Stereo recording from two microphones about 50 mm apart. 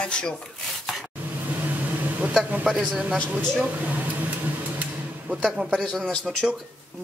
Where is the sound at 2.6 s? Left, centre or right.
Centre.